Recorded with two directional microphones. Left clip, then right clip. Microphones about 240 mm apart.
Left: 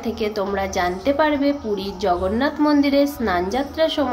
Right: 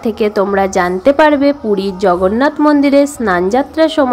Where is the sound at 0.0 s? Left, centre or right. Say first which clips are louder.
Right 10 dB; right.